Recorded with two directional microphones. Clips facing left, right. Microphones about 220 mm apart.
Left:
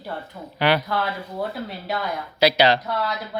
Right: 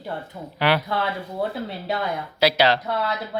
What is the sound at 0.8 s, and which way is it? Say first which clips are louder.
Speech: even; 25° right (ahead or behind).